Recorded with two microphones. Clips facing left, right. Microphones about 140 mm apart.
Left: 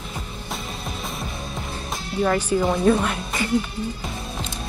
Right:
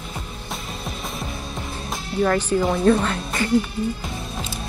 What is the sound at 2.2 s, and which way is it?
Speech, 5° left (ahead or behind).